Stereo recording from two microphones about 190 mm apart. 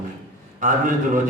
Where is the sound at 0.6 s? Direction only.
45° right (ahead or behind).